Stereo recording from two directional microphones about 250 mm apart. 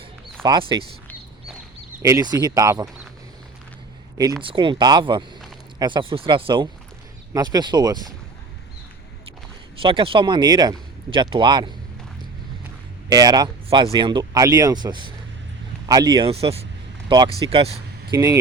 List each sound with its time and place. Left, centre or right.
0.4 s speech: centre
2.0 s speech: centre
4.2 s speech: centre
9.8 s speech: right
13.1 s speech: centre